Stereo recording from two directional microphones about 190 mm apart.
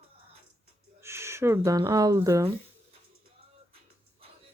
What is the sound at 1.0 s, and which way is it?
Speech, 15° right (ahead or behind).